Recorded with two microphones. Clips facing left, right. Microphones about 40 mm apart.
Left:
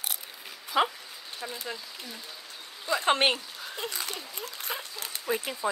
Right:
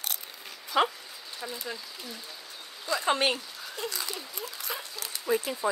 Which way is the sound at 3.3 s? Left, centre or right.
Left.